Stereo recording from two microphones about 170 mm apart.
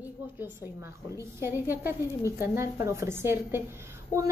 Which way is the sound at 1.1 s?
15° right (ahead or behind).